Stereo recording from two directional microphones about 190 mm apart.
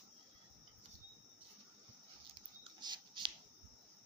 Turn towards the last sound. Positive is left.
turn(degrees=-25)  # may be behind; listen again after turning